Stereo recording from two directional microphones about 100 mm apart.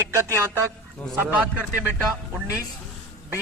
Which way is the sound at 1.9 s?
10° right (ahead or behind).